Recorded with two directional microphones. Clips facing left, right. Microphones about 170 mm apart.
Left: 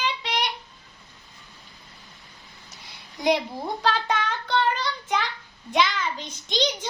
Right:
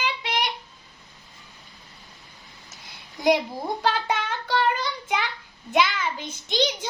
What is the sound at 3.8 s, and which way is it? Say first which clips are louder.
Child singing: left 1 dB; 10° right (ahead or behind).